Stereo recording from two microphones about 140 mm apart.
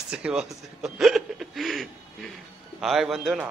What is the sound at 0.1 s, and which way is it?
Speech, 5° right (ahead or behind).